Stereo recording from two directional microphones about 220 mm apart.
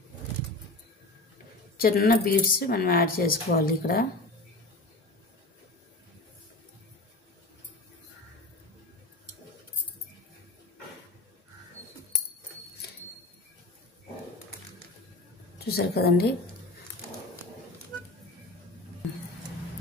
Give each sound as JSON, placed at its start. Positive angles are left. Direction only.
{"t": 1.8, "sound": "speech", "side_deg": 40}
{"t": 15.6, "sound": "a woman's voice", "side_deg": 45}